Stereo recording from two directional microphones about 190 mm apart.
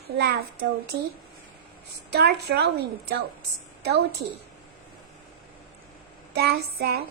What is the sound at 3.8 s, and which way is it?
Speech, 55° right (ahead or behind).